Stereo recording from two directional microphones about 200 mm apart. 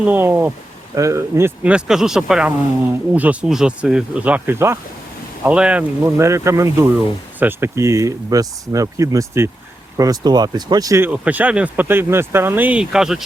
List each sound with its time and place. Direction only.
0.0 s speech: 10° right (ahead or behind)